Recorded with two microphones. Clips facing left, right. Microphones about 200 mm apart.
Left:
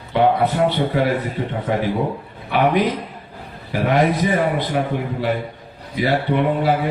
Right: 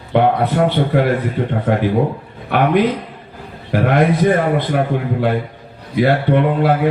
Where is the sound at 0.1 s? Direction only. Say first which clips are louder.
Right 2 dB; 55° right (ahead or behind).